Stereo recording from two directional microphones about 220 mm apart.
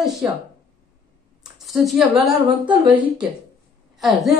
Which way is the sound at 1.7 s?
Centre (ahead or behind).